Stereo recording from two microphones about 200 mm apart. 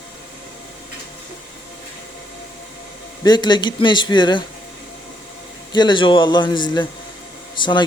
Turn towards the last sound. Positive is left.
turn(degrees=25)  # may be behind; listen again after turning